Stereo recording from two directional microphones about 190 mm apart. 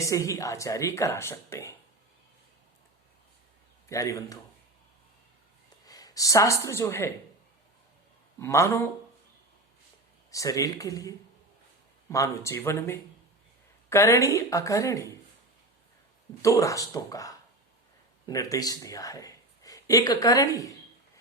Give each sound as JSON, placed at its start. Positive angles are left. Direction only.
{"t": 0.0, "sound": "speech", "side_deg": 15}
{"t": 3.8, "sound": "speech", "side_deg": 15}
{"t": 5.8, "sound": "speech", "side_deg": 20}
{"t": 8.4, "sound": "speech", "side_deg": 15}
{"t": 10.3, "sound": "speech", "side_deg": 15}
{"t": 16.4, "sound": "speech", "side_deg": 15}